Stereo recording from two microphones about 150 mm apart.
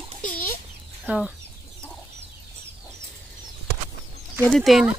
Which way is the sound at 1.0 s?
5° right (ahead or behind).